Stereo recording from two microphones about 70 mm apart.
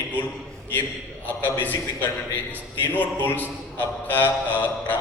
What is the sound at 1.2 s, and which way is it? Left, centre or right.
A man's voice, left.